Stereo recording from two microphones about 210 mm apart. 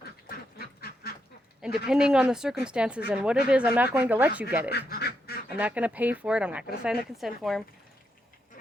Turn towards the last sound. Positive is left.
turn(degrees=0)  # may be behind; listen again after turning